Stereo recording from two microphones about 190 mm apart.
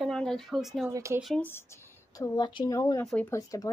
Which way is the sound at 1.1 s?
Centre (ahead or behind).